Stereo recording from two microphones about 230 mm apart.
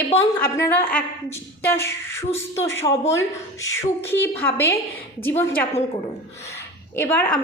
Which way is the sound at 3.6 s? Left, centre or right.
Centre.